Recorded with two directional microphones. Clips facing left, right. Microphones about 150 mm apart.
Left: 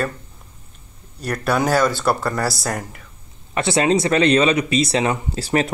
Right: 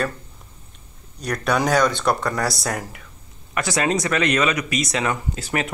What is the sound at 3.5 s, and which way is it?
Speech, 25° left (ahead or behind).